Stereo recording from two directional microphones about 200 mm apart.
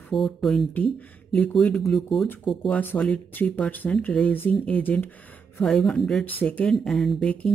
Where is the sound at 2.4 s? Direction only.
25° left (ahead or behind).